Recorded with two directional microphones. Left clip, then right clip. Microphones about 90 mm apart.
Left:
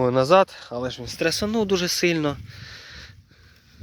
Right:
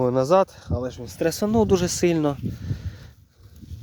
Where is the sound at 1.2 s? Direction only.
70° right (ahead or behind).